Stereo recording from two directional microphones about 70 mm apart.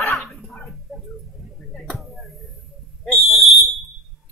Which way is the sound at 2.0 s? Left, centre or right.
Centre.